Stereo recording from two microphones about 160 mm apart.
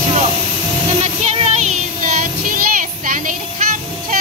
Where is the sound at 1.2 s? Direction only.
40° right (ahead or behind).